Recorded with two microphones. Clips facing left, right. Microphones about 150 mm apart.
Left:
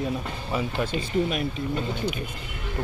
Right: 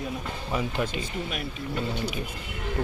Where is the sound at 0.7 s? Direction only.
15° right (ahead or behind).